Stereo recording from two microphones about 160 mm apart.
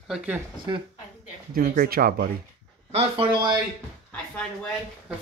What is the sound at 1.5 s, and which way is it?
Speech, 65° right (ahead or behind).